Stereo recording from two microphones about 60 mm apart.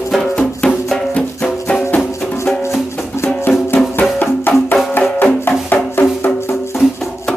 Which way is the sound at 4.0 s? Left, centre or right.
Left.